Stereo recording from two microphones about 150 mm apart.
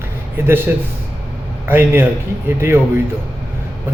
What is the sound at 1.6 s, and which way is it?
A man's voice, 15° right (ahead or behind).